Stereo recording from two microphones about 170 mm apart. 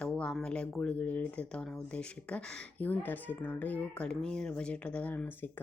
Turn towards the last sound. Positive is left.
turn(degrees=10)  # may be behind; listen again after turning